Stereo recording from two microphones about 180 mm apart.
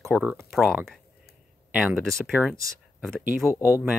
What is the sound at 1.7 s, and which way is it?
Speech, 10° right (ahead or behind).